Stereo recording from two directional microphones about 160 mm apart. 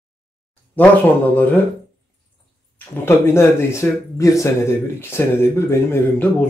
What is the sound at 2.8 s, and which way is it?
Speech, 15° left (ahead or behind).